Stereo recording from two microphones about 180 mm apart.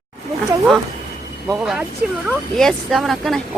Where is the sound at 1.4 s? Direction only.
5° right (ahead or behind).